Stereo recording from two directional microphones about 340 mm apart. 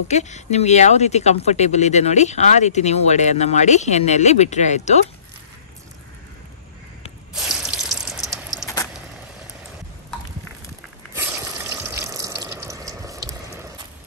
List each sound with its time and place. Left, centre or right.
0.1 s speech: centre
7.3 s water: centre
10.1 s a sound: centre
11.1 s water: centre